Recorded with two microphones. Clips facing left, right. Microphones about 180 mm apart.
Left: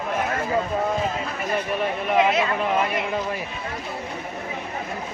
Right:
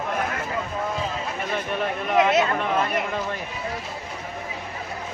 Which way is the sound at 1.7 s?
Centre (ahead or behind).